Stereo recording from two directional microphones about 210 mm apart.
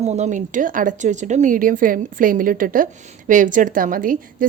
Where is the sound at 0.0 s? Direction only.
30° right (ahead or behind).